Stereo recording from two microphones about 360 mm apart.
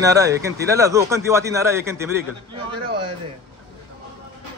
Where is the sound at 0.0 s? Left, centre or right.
Centre.